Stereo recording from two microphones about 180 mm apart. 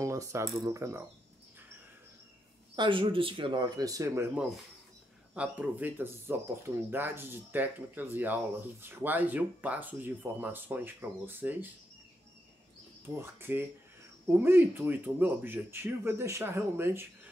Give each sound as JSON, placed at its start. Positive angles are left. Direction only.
{"t": 0.0, "sound": "speech", "side_deg": -15}
{"t": 2.7, "sound": "speech", "side_deg": -25}
{"t": 13.0, "sound": "speech", "side_deg": -15}